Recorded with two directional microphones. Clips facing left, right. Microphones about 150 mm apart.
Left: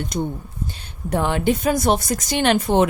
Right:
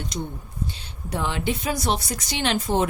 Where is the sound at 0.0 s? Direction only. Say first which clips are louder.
Left 6 dB; 50° left (ahead or behind).